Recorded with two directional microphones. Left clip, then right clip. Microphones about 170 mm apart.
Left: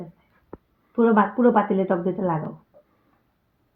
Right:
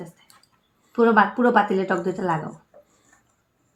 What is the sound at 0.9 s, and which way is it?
A woman's voice, 30° left (ahead or behind).